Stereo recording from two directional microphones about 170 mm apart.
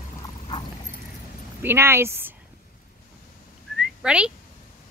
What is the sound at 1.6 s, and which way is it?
Speech, 15° right (ahead or behind).